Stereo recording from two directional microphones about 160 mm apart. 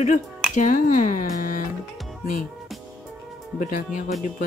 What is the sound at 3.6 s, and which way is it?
Speech, 55° left (ahead or behind).